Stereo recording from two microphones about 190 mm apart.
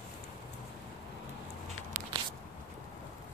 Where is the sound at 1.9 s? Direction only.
45° right (ahead or behind).